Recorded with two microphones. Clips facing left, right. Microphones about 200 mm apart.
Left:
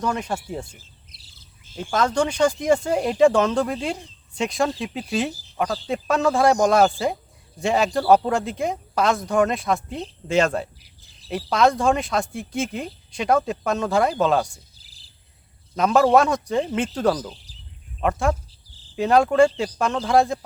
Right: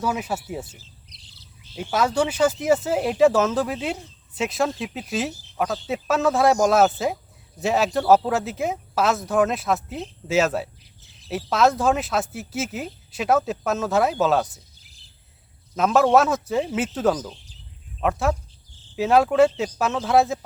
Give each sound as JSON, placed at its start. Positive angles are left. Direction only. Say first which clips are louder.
{"t": 0.0, "sound": "speech", "louder": "even", "side_deg": -5}
{"t": 1.3, "sound": "bird vocalization", "louder": "right 1 dB", "side_deg": 50}
{"t": 1.8, "sound": "speech", "louder": "even", "side_deg": -5}
{"t": 14.8, "sound": "cricket", "louder": "even", "side_deg": 35}
{"t": 15.7, "sound": "speech", "louder": "left 1 dB", "side_deg": 0}